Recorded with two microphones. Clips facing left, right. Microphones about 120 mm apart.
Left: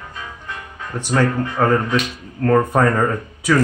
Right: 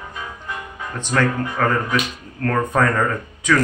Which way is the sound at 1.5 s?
20° left (ahead or behind).